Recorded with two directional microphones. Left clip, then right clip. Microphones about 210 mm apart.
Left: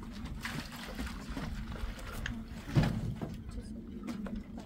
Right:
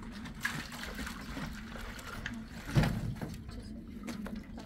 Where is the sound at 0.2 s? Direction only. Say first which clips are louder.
Right 4 dB; 30° right (ahead or behind).